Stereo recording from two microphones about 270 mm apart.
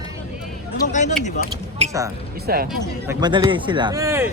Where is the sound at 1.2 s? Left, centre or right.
Left.